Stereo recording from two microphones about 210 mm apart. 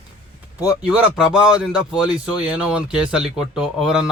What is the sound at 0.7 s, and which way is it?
Speech, 5° right (ahead or behind).